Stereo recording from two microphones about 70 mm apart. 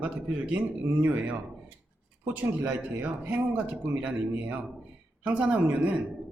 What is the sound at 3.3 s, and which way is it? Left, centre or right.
Speech, centre.